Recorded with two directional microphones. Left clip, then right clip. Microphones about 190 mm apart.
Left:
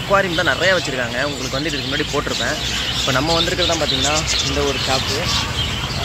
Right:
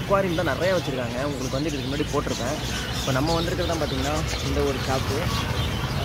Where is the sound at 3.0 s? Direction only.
15° left (ahead or behind).